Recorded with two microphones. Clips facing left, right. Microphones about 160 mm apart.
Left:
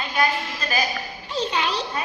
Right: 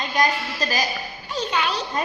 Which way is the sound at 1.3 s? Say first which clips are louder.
Even; 30° left (ahead or behind).